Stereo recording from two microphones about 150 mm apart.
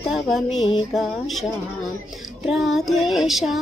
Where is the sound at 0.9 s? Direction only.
Centre (ahead or behind).